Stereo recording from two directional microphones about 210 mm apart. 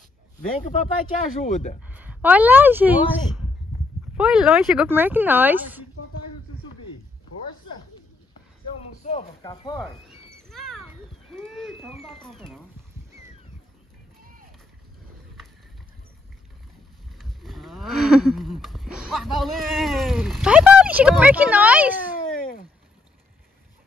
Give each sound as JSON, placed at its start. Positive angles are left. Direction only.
{"t": 0.6, "sound": "speech", "side_deg": 35}
{"t": 1.8, "sound": "speech", "side_deg": -5}
{"t": 9.0, "sound": "speech", "side_deg": 30}
{"t": 9.4, "sound": "speech", "side_deg": 20}
{"t": 10.5, "sound": "a sound", "side_deg": 0}
{"t": 12.0, "sound": "speech", "side_deg": 0}
{"t": 17.2, "sound": "cattle", "side_deg": 0}